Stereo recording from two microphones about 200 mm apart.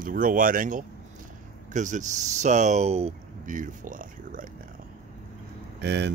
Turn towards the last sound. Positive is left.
turn(degrees=-60)  # may be behind; listen again after turning